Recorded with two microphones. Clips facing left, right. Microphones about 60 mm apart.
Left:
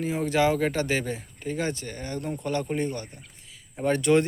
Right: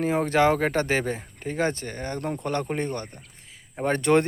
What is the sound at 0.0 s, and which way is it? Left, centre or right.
Speech, right.